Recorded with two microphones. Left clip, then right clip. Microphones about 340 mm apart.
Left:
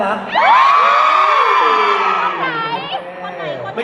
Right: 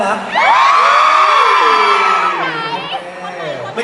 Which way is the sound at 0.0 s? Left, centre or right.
Centre.